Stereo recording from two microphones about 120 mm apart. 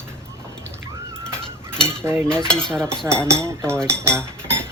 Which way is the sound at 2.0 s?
20° right (ahead or behind).